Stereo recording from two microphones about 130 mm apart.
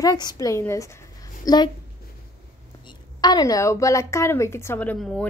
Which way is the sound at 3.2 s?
30° left (ahead or behind).